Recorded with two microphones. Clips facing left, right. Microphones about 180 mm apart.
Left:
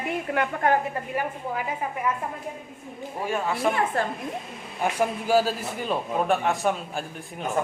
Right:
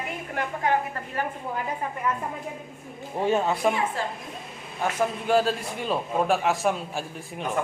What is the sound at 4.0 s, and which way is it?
Speech, 55° left (ahead or behind).